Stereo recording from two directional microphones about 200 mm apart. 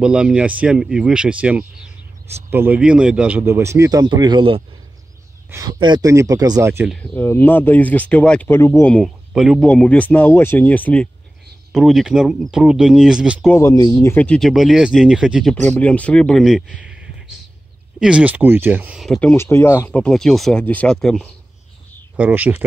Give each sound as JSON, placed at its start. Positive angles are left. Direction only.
{"t": 0.0, "sound": "a man's voice", "side_deg": -5}
{"t": 6.9, "sound": "speech", "side_deg": 10}
{"t": 13.5, "sound": "speech", "side_deg": 15}
{"t": 15.5, "sound": "speech", "side_deg": 5}
{"t": 18.0, "sound": "speech", "side_deg": -5}
{"t": 22.1, "sound": "a man's voice", "side_deg": -10}